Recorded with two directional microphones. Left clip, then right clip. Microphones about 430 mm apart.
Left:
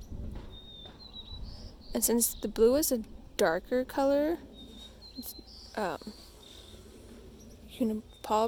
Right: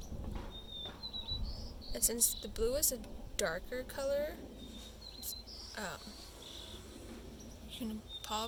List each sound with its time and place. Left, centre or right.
1.9 s a woman's voice: centre
5.3 s cricket: centre
7.7 s a sound: centre